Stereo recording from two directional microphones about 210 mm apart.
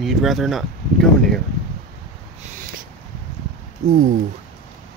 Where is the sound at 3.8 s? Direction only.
35° right (ahead or behind).